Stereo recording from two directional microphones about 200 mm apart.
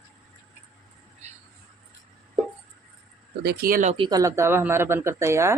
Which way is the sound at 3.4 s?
50° right (ahead or behind).